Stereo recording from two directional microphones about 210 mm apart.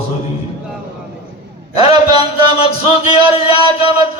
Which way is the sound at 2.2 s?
20° right (ahead or behind).